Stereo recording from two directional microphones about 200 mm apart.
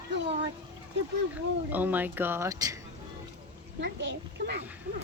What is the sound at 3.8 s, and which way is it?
Speech, 60° right (ahead or behind).